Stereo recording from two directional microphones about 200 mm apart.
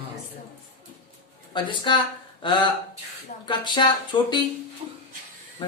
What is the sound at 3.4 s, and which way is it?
Speech, 20° left (ahead or behind).